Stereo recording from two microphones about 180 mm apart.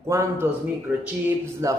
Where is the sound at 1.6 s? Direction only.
20° right (ahead or behind).